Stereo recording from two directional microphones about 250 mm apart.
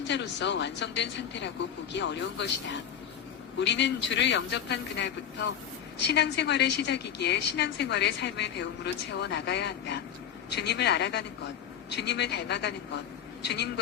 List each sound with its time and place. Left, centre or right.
0.1 s a woman's voice: left